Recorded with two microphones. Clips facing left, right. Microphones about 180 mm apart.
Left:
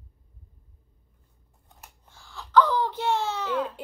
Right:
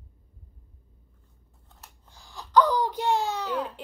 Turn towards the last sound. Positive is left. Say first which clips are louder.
# left 1 dB
turn(degrees=-15)  # may be behind; listen again after turning